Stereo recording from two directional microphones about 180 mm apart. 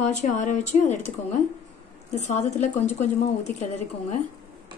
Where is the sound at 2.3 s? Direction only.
40° left (ahead or behind).